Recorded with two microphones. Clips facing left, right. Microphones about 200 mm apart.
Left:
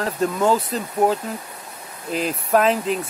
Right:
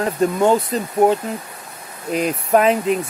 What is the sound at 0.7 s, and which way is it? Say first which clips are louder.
Speech: right 4 dB; centre (ahead or behind).